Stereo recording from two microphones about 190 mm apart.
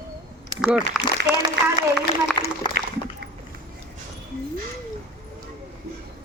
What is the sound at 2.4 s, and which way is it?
Speech, 25° left (ahead or behind).